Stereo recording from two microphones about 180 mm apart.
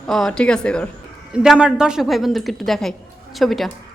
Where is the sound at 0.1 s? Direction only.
Centre (ahead or behind).